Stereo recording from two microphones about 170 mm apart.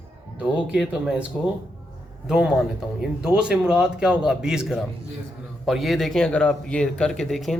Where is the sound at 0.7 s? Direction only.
5° right (ahead or behind).